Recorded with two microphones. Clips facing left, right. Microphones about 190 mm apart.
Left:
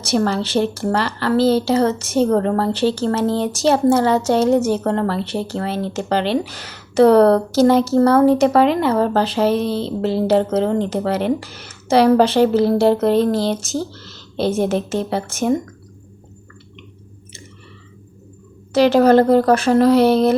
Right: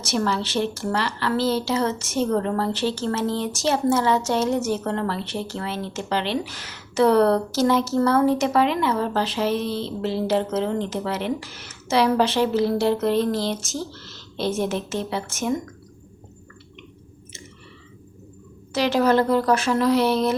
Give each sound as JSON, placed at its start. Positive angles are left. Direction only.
{"t": 0.2, "sound": "a woman's voice", "side_deg": 40}
{"t": 18.7, "sound": "a woman's voice", "side_deg": 35}